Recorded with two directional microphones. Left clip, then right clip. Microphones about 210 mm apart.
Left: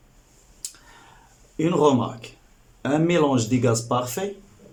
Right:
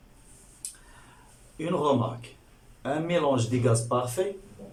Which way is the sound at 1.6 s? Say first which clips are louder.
Left 6 dB; 40° left (ahead or behind).